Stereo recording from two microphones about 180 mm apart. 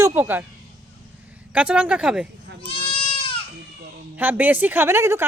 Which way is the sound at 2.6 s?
30° left (ahead or behind).